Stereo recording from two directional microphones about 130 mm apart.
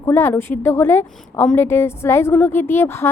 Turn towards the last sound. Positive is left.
turn(degrees=20)  # may be behind; listen again after turning